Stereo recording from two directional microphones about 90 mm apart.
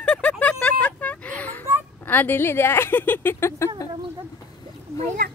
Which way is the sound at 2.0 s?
20° left (ahead or behind).